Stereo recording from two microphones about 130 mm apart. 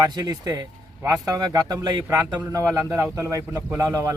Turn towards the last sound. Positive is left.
turn(degrees=-25)  # may be behind; listen again after turning